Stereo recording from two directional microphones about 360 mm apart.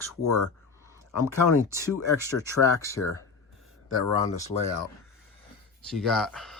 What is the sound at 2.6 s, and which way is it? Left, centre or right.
Speech, centre.